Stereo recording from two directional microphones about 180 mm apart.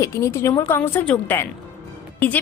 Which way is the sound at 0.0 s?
15° left (ahead or behind).